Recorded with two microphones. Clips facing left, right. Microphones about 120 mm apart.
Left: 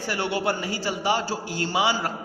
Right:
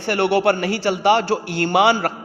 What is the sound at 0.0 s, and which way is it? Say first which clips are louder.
A man's voice: right 9 dB; 65° right (ahead or behind).